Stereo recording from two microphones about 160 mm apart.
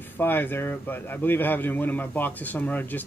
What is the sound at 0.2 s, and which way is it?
A man's voice, 15° left (ahead or behind).